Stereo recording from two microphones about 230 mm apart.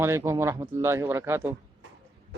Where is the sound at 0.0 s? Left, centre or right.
Centre.